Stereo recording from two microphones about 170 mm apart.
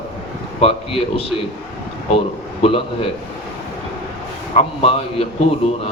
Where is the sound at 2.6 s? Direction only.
35° left (ahead or behind).